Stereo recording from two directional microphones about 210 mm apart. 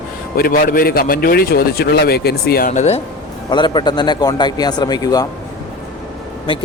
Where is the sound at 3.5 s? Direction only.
20° left (ahead or behind).